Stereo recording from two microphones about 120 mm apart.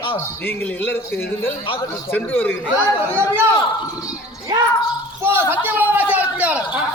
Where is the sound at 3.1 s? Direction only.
20° right (ahead or behind).